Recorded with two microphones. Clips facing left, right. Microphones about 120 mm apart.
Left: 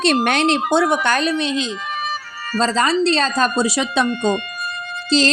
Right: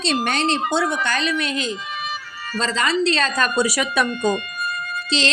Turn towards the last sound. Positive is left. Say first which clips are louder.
# left 6 dB
turn(degrees=40)  # may be behind; listen again after turning